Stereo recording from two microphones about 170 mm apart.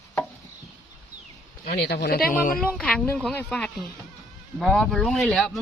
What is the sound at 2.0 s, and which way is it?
Speech, 55° left (ahead or behind).